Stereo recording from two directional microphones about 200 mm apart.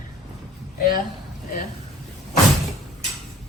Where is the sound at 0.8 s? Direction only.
45° left (ahead or behind).